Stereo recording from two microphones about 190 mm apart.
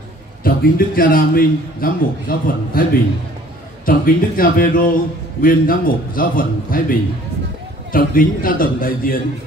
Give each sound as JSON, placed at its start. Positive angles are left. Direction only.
{"t": 0.4, "sound": "a man's voice", "side_deg": 50}